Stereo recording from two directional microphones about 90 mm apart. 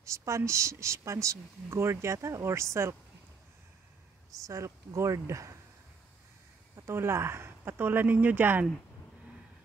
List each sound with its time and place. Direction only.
0.0 s a woman's voice: 35° right (ahead or behind)
4.5 s speech: 35° right (ahead or behind)
6.9 s speech: 30° right (ahead or behind)